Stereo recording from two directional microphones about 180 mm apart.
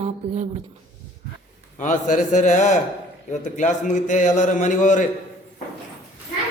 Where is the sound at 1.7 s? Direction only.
45° left (ahead or behind).